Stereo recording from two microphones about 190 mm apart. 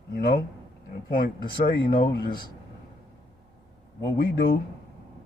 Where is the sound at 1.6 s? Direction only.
50° left (ahead or behind).